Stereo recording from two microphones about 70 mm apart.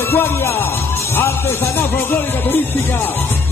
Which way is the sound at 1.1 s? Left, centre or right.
Left.